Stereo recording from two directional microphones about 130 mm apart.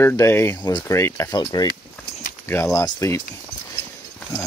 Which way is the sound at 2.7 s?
25° left (ahead or behind).